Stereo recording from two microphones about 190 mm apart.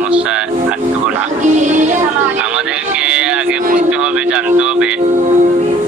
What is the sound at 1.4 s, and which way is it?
Music, 40° right (ahead or behind).